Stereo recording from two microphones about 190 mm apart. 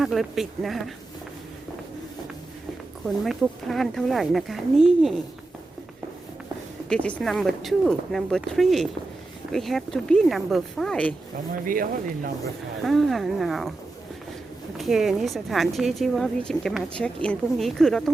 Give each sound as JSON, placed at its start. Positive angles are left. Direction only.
{"t": 0.0, "sound": "speech", "side_deg": 0}
{"t": 3.2, "sound": "speech", "side_deg": 0}
{"t": 6.8, "sound": "speech", "side_deg": 5}
{"t": 11.6, "sound": "speech", "side_deg": -50}
{"t": 12.8, "sound": "speech", "side_deg": 0}
{"t": 14.8, "sound": "speech", "side_deg": 0}